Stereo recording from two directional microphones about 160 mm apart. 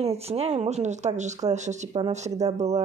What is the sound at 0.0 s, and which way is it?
Speech, 40° right (ahead or behind).